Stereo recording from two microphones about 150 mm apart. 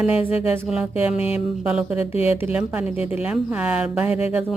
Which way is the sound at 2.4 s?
10° right (ahead or behind).